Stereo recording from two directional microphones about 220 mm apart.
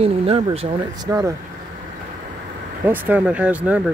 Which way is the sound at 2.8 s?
10° right (ahead or behind).